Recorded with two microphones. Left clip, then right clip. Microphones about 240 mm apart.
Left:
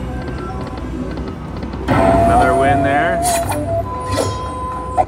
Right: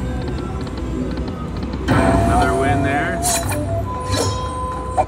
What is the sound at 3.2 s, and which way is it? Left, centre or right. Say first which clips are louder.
Music: left 4 dB; centre.